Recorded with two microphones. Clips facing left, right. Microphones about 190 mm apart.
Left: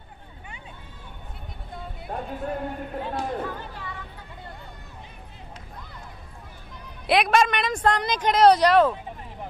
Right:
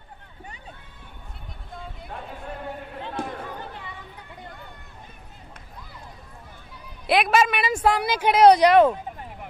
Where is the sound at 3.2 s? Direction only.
55° right (ahead or behind).